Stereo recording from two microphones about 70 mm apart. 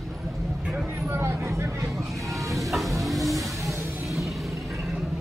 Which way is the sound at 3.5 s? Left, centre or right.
Right.